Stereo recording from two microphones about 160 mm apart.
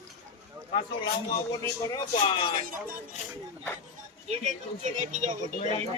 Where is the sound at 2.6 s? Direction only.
60° right (ahead or behind).